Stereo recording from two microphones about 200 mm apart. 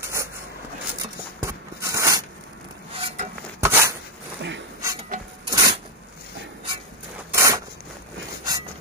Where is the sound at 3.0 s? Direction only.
35° right (ahead or behind).